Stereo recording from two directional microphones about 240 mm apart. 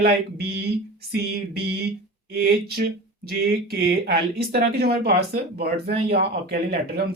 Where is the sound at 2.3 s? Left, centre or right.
Right.